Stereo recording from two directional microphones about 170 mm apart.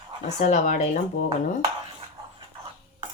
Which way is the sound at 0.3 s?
40° left (ahead or behind).